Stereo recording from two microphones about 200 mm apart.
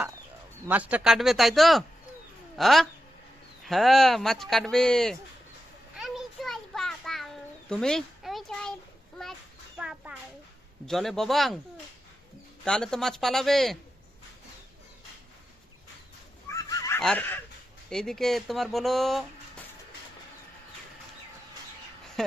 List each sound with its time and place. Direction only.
0.7 s speech: 5° right (ahead or behind)
6.0 s a sound: centre (ahead or behind)
9.7 s a sound: 5° right (ahead or behind)
10.8 s speech: centre (ahead or behind)
12.6 s speech: 5° left (ahead or behind)
16.5 s fowl: 15° left (ahead or behind)
17.0 s fowl: 5° left (ahead or behind)
17.8 s speech: centre (ahead or behind)